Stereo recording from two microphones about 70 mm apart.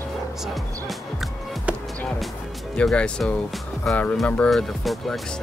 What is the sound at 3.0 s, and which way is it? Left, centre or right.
Speech, centre.